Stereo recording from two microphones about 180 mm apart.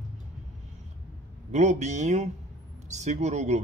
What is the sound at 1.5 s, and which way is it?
Speech, 40° right (ahead or behind).